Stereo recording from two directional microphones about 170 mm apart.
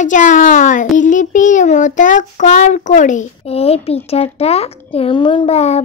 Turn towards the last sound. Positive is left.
turn(degrees=40)  # may be behind; listen again after turning